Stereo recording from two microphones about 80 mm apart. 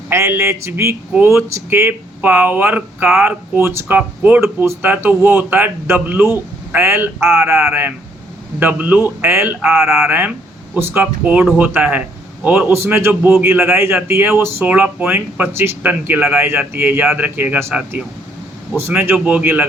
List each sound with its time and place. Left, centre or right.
0.1 s speech: right
12.7 s speech: right
18.8 s speech: right